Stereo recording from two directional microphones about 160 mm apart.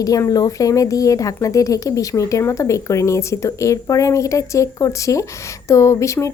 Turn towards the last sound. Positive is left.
turn(degrees=20)  # may be behind; listen again after turning